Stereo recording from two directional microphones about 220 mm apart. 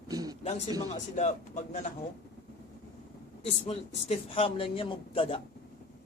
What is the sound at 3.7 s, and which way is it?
Speech, 25° left (ahead or behind).